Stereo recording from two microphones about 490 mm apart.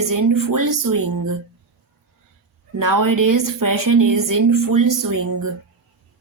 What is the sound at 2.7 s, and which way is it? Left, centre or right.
A woman's voice, right.